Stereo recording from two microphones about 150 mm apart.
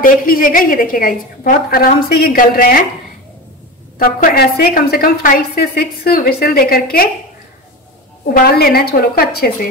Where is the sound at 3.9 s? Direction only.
70° left (ahead or behind); by 7.1 s 90° left.